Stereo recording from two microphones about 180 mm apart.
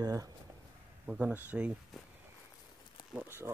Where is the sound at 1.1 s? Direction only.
5° right (ahead or behind).